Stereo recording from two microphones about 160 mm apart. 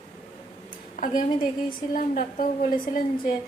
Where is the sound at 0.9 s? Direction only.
60° left (ahead or behind).